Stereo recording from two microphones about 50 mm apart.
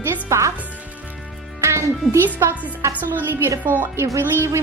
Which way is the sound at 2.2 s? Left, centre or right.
Right.